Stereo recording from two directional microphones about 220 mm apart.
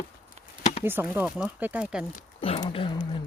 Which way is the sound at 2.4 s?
25° left (ahead or behind).